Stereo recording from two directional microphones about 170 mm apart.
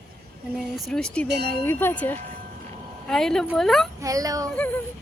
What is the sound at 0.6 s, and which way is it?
Speech, centre (ahead or behind).